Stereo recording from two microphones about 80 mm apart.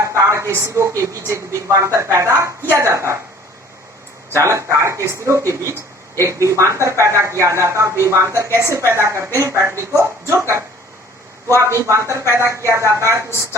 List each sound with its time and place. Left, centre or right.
0.0 s a woman's voice: right
4.3 s a woman's voice: right
11.4 s a woman's voice: right